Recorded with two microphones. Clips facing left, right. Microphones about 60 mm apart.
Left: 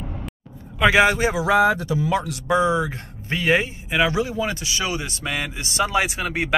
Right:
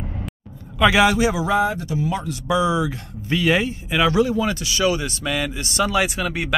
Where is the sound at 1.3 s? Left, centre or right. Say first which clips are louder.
Left 2 dB; left.